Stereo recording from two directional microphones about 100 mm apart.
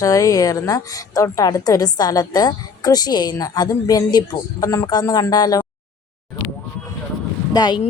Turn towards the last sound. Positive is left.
turn(degrees=45)  # may be behind; listen again after turning